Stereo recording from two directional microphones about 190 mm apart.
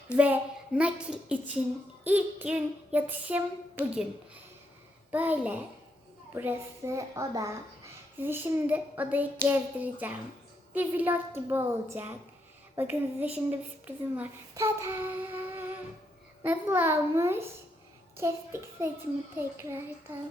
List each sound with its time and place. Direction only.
0.2 s a woman's voice: 5° right (ahead or behind)
5.1 s a woman's voice: 10° right (ahead or behind)